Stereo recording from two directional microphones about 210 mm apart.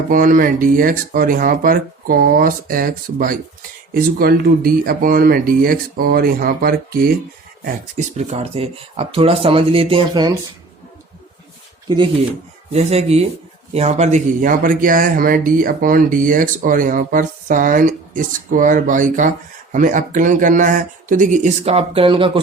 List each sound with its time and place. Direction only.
0.1 s speech: 40° right (ahead or behind)
7.6 s speech: 35° right (ahead or behind)
12.7 s speech: 30° right (ahead or behind)